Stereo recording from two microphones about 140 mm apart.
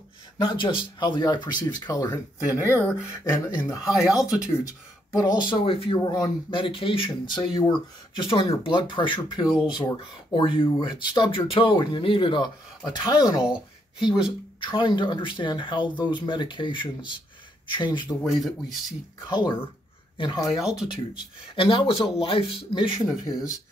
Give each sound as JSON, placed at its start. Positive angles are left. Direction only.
{"t": 0.4, "sound": "speech", "side_deg": 35}
{"t": 2.4, "sound": "speech", "side_deg": -15}
{"t": 3.1, "sound": "speech", "side_deg": 20}
{"t": 3.9, "sound": "speech", "side_deg": -5}
{"t": 5.1, "sound": "speech", "side_deg": 25}
{"t": 5.9, "sound": "speech", "side_deg": 25}
{"t": 8.2, "sound": "speech", "side_deg": 40}
{"t": 18.2, "sound": "speech", "side_deg": 0}
{"t": 19.2, "sound": "speech", "side_deg": 30}
{"t": 20.5, "sound": "speech", "side_deg": 0}
{"t": 21.1, "sound": "speech", "side_deg": 35}